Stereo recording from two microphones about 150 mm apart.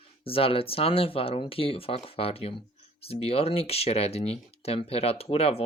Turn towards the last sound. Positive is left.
turn(degrees=40)  # may be behind; listen again after turning